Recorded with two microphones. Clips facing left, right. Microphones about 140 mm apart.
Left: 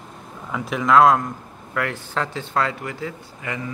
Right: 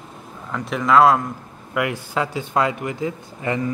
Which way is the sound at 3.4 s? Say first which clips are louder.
Right 7 dB; 30° right (ahead or behind).